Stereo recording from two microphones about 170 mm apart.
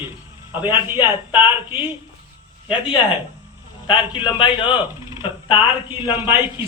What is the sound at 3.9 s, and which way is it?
Speech, 30° left (ahead or behind).